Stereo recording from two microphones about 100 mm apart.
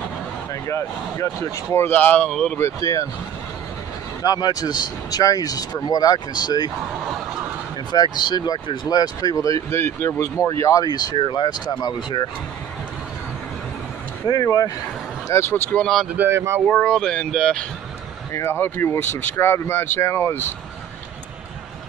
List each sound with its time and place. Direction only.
0.7 s speech: 30° left (ahead or behind); by 2.5 s 10° left (ahead or behind)
2.5 s speech: 30° left (ahead or behind)
4.2 s speech: 40° left (ahead or behind)
7.9 s speech: 45° left (ahead or behind)
11.1 s speech: 55° left (ahead or behind)
14.2 s speech: 40° left (ahead or behind)
15.2 s speech: 25° left (ahead or behind)
16.3 s speech: 25° right (ahead or behind)
16.6 s speech: 10° left (ahead or behind)
18.3 s speech: 25° left (ahead or behind)